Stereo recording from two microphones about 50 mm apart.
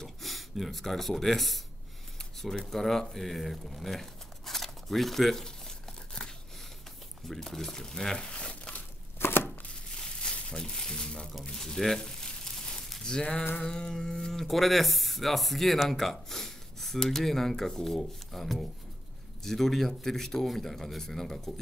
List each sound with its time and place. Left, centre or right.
0.0 s speech: centre
2.1 s a sound: centre
7.2 s speech: centre
8.3 s crumpling: centre
9.2 s chopping: left
9.9 s crumpling: centre
11.4 s a sound: centre
13.0 s speech: centre